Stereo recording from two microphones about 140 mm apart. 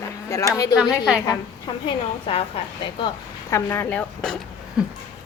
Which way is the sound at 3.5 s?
15° left (ahead or behind).